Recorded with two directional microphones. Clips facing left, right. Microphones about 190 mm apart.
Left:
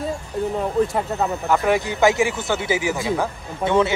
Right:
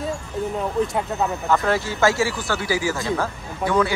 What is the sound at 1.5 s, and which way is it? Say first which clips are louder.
Speech: left 2 dB; 15° left (ahead or behind).